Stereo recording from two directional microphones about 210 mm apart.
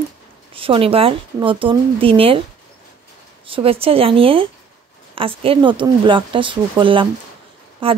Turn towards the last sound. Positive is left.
turn(degrees=-25)  # may be behind; listen again after turning